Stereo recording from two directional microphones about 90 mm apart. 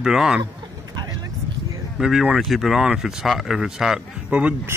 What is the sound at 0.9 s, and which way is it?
Vehicle, 45° right (ahead or behind).